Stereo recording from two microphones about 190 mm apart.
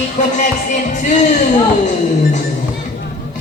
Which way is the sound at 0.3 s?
40° left (ahead or behind).